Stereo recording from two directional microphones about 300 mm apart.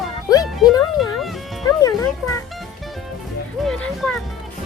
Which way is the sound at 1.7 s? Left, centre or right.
Centre.